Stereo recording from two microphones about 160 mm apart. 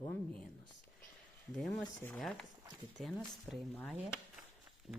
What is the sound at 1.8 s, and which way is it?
Speech, 5° left (ahead or behind).